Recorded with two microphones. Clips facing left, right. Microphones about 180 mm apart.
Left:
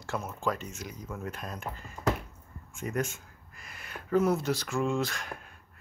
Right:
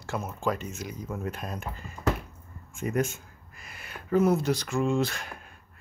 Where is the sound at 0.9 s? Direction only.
20° right (ahead or behind).